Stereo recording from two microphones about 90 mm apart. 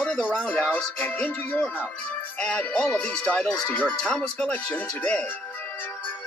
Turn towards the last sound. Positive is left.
turn(degrees=15)  # may be behind; listen again after turning